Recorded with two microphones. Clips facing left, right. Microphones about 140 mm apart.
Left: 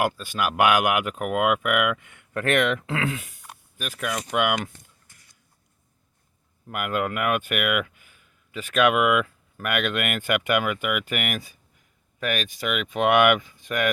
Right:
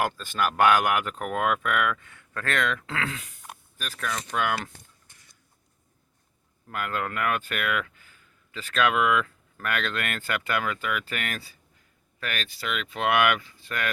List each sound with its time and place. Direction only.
0.0 s speech: 10° left (ahead or behind)
6.7 s speech: 15° left (ahead or behind)